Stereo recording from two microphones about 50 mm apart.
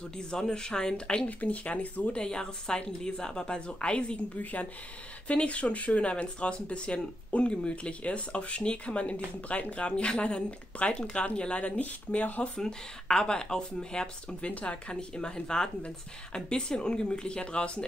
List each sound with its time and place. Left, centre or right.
0.3 s speech: centre; by 2.2 s left
2.2 s a woman's voice: centre
4.4 s speech: left
11.8 s speech: left
12.5 s a woman's voice: centre